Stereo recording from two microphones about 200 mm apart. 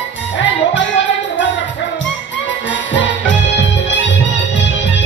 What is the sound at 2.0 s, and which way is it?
Music, 65° left (ahead or behind).